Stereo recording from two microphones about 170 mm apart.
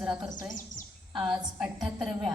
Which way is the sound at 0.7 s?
50° left (ahead or behind).